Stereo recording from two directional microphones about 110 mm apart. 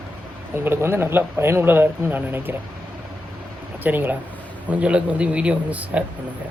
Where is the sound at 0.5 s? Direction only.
20° right (ahead or behind).